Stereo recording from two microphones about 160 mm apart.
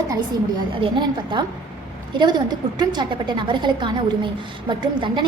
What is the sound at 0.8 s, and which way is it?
A woman's voice, 30° right (ahead or behind).